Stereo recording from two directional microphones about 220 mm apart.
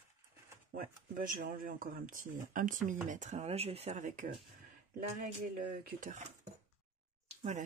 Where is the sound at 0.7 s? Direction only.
40° right (ahead or behind).